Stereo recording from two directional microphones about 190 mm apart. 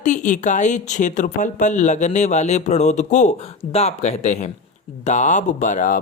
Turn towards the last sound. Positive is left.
turn(degrees=45)  # may be behind; listen again after turning